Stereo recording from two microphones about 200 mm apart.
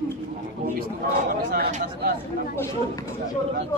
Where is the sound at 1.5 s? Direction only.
50° right (ahead or behind).